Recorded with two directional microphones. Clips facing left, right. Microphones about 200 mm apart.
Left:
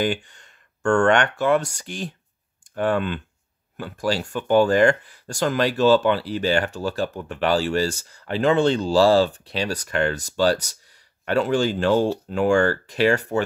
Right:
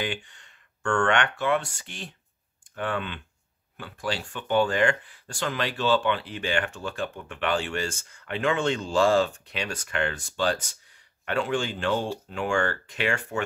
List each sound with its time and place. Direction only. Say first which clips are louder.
0.0 s speech: left 8 dB; 40° left (ahead or behind)